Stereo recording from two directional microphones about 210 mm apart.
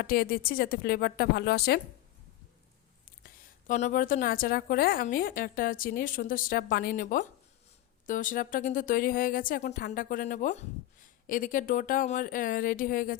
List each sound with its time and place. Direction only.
0.0 s a woman's voice: 45° left (ahead or behind)
3.7 s a woman's voice: 35° left (ahead or behind)